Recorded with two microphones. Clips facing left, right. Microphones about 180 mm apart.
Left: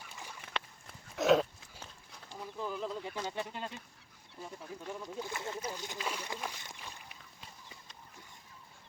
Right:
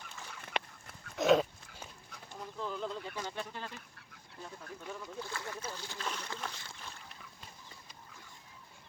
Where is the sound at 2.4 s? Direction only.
5° left (ahead or behind).